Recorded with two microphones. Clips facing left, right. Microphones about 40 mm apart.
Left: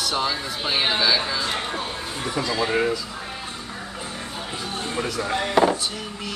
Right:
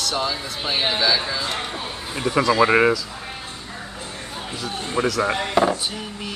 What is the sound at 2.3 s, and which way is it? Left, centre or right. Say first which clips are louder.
Speech: right 8 dB; right.